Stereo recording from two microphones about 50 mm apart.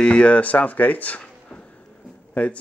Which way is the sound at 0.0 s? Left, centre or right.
Left.